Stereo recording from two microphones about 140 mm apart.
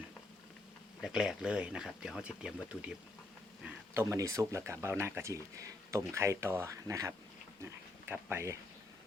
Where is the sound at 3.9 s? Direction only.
20° right (ahead or behind).